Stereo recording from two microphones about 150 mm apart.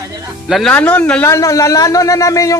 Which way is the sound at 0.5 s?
5° left (ahead or behind).